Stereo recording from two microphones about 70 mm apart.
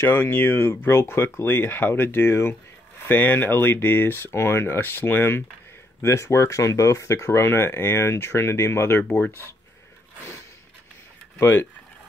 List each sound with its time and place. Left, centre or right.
0.0 s speech: left
6.0 s speech: left
11.3 s speech: left